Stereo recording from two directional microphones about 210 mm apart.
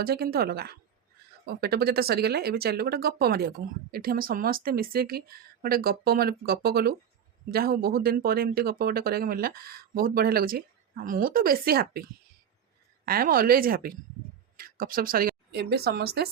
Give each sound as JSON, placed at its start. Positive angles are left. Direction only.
{"t": 0.0, "sound": "speech", "side_deg": -45}
{"t": 13.1, "sound": "speech", "side_deg": -45}